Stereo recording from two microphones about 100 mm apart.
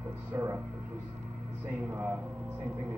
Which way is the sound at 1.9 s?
30° right (ahead or behind).